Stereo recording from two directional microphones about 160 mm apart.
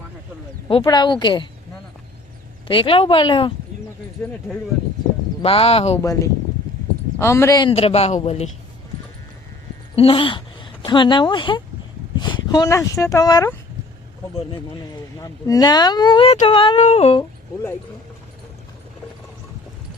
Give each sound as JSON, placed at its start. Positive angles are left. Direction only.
{"t": 0.9, "sound": "speech", "side_deg": 25}
{"t": 2.6, "sound": "a man's voice", "side_deg": 35}
{"t": 5.4, "sound": "a man's voice", "side_deg": 40}
{"t": 6.0, "sound": "speech", "side_deg": 20}
{"t": 7.6, "sound": "a man's voice", "side_deg": 35}
{"t": 9.9, "sound": "a woman's voice", "side_deg": 35}
{"t": 15.2, "sound": "speech", "side_deg": 20}
{"t": 16.7, "sound": "a man's voice", "side_deg": 45}